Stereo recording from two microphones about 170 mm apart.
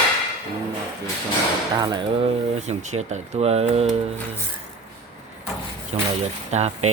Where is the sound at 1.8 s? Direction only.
25° right (ahead or behind).